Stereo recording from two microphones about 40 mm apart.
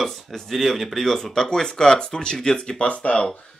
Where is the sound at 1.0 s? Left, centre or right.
Centre; by 3.2 s left.